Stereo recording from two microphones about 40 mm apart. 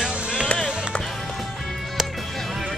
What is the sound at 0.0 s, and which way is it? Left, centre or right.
Music, right.